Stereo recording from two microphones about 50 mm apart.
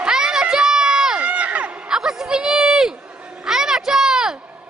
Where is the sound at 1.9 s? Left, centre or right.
Centre.